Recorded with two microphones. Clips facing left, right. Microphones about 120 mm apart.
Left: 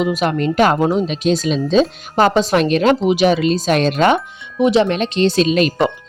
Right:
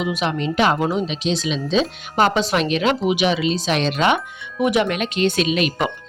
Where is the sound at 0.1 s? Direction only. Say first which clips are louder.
Left 5 dB; 45° left (ahead or behind).